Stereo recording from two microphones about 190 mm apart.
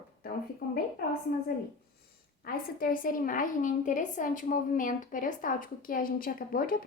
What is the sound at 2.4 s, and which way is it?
A woman's voice, 50° left (ahead or behind).